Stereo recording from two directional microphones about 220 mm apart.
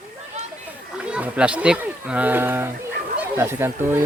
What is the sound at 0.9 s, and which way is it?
Speech, 5° right (ahead or behind).